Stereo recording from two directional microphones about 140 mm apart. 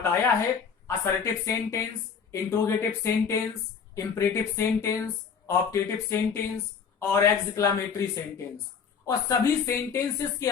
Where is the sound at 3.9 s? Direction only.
20° left (ahead or behind).